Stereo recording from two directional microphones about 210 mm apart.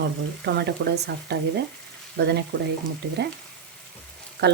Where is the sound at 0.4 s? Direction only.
50° right (ahead or behind).